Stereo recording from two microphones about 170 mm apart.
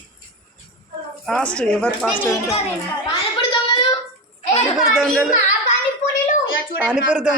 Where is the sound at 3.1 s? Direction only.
30° left (ahead or behind).